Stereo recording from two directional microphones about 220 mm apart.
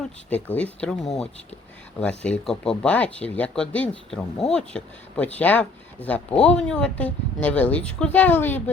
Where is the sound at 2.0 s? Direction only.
5° left (ahead or behind).